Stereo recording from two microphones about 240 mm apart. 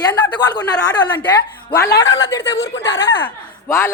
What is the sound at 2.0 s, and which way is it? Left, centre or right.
Speech, centre.